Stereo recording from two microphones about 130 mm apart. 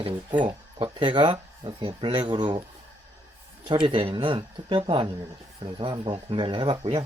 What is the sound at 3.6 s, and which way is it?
Speech, 40° right (ahead or behind).